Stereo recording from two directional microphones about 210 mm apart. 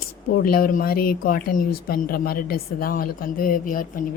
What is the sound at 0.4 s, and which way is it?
Speech, 45° left (ahead or behind).